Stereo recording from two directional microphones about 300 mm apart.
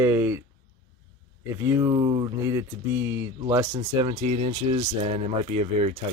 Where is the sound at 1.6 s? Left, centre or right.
Centre.